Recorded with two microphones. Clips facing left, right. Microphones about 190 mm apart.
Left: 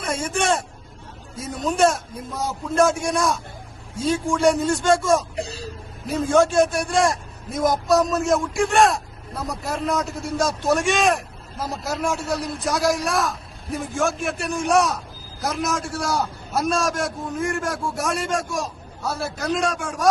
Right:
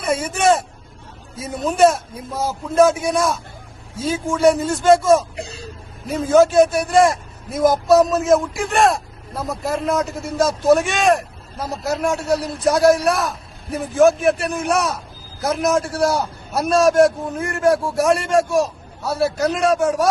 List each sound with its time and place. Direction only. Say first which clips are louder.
0.0 s a man's voice: right 5 dB; 5° right (ahead or behind)
5.5 s speech: left 1 dB; 35° left (ahead or behind)
6.1 s a man's voice: right 4 dB; centre (ahead or behind)